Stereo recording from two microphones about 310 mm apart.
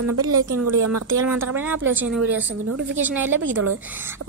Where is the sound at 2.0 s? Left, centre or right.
Centre.